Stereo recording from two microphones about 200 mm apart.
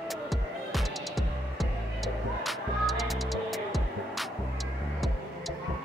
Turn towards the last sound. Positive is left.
turn(degrees=0)  # may be behind; listen again after turning